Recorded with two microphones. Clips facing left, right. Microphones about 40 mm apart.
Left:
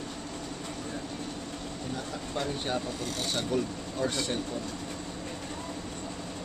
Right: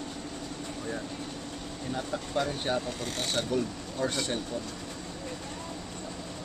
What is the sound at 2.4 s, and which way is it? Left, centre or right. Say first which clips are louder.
Speech: left 2 dB; centre.